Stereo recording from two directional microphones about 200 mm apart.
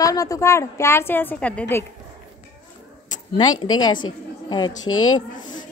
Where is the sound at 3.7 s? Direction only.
20° left (ahead or behind).